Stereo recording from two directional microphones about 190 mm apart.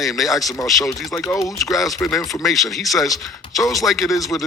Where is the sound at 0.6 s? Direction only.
15° left (ahead or behind).